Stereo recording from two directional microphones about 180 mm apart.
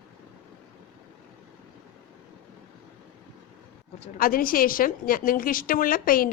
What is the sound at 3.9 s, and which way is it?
A woman's voice, 45° left (ahead or behind).